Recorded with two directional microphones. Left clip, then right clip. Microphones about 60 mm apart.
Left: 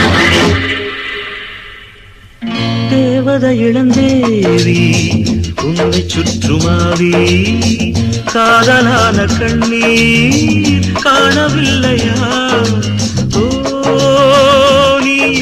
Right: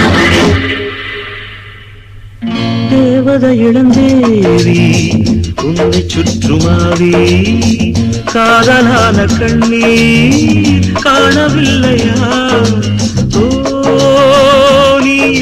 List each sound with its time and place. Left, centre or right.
0.0 s music: left
2.5 s music: left